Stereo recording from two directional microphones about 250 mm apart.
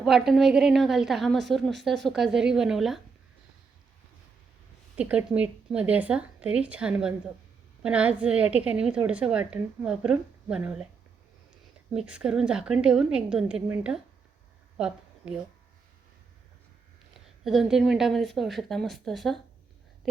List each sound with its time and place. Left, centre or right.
0.0 s a woman's voice: centre
4.9 s a woman's voice: centre
11.9 s a woman's voice: centre
14.8 s a sound: centre
17.2 s a woman's voice: centre